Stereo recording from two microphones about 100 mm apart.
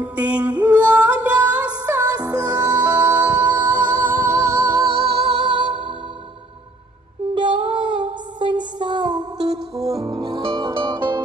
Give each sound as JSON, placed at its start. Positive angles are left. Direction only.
{"t": 0.0, "sound": "music", "side_deg": -15}
{"t": 2.0, "sound": "music", "side_deg": -40}
{"t": 2.5, "sound": "music", "side_deg": -15}
{"t": 4.4, "sound": "music", "side_deg": -40}
{"t": 4.9, "sound": "music", "side_deg": -65}
{"t": 7.3, "sound": "child singing", "side_deg": -55}
{"t": 10.5, "sound": "music", "side_deg": -55}